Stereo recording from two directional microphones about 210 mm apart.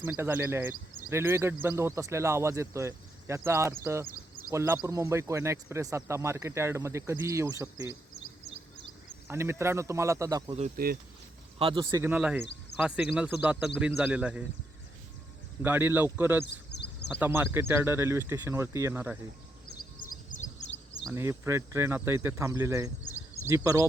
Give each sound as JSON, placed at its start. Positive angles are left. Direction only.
{"t": 0.0, "sound": "speech", "side_deg": -10}
{"t": 9.2, "sound": "speech", "side_deg": -10}
{"t": 10.8, "sound": "speech", "side_deg": -45}
{"t": 11.6, "sound": "speech", "side_deg": -25}
{"t": 15.6, "sound": "speech", "side_deg": -10}
{"t": 16.7, "sound": "a sound", "side_deg": 55}
{"t": 17.1, "sound": "speech", "side_deg": -10}
{"t": 19.7, "sound": "a sound", "side_deg": 40}
{"t": 21.0, "sound": "speech", "side_deg": -10}